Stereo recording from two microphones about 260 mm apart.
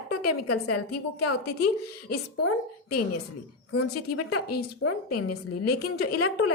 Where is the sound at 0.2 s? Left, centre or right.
Left.